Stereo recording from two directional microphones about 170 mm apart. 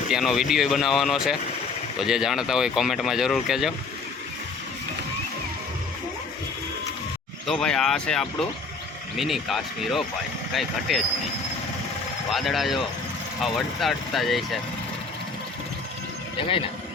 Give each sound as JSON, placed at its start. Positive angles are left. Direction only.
{"t": 0.1, "sound": "speech", "side_deg": 0}
{"t": 7.4, "sound": "speech", "side_deg": 5}
{"t": 12.3, "sound": "speech", "side_deg": 0}
{"t": 16.4, "sound": "speech", "side_deg": 30}